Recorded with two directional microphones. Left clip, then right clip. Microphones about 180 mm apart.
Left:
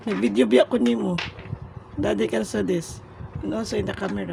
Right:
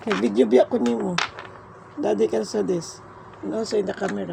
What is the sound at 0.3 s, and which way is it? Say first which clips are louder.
Speech: even; 25° left (ahead or behind).